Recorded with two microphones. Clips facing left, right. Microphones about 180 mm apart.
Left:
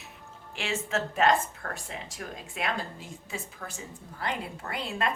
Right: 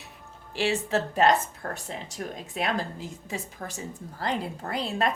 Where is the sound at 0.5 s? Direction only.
35° right (ahead or behind).